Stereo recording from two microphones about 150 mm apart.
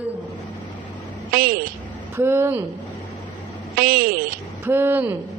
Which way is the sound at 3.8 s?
70° right (ahead or behind).